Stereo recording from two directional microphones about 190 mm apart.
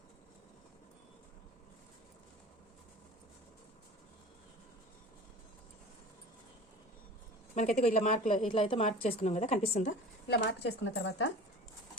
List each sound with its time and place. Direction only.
7.5 s a woman's voice: 40° left (ahead or behind)
10.2 s speech: 60° left (ahead or behind)